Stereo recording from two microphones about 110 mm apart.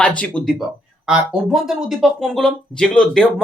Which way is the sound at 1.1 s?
5° right (ahead or behind).